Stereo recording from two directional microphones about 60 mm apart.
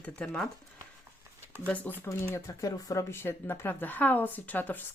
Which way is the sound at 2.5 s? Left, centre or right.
Left.